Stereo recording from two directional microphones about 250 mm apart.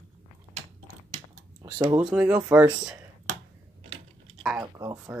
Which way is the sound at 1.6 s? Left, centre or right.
Centre.